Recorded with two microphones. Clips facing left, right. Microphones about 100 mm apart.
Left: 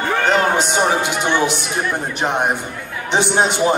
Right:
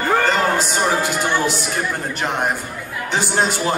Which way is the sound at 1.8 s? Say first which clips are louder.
Left 2 dB; 20° left (ahead or behind).